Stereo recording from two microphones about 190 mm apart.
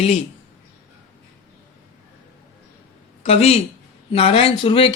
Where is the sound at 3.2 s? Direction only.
35° left (ahead or behind).